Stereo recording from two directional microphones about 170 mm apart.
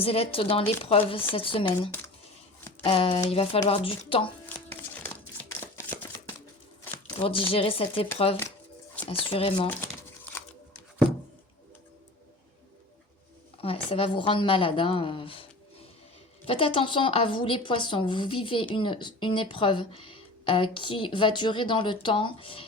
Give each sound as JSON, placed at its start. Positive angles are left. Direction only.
{"t": 0.0, "sound": "speech", "side_deg": 35}
{"t": 4.4, "sound": "a sound", "side_deg": 10}
{"t": 7.2, "sound": "speech", "side_deg": 35}
{"t": 9.0, "sound": "speech", "side_deg": 35}
{"t": 13.6, "sound": "speech", "side_deg": 35}
{"t": 16.5, "sound": "a woman's voice", "side_deg": 30}